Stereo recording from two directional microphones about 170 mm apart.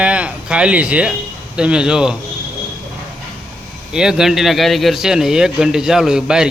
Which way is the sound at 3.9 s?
5° right (ahead or behind).